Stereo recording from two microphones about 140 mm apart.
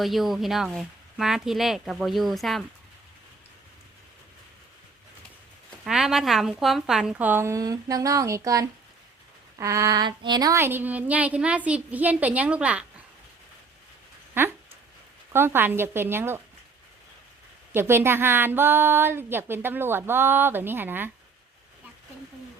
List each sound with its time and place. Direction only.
0.0 s speech: centre (ahead or behind)
5.8 s speech: 5° right (ahead or behind)
14.4 s speech: 15° right (ahead or behind)
17.7 s speech: 15° right (ahead or behind)